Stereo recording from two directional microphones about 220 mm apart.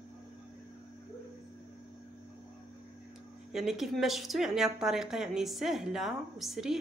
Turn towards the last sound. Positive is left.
turn(degrees=0)  # may be behind; listen again after turning